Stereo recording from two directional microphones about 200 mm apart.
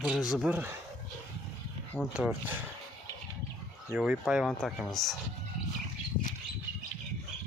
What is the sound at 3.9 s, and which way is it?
Speech, 5° right (ahead or behind).